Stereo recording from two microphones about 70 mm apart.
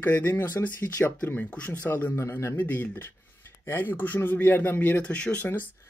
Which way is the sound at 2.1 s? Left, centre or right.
Left.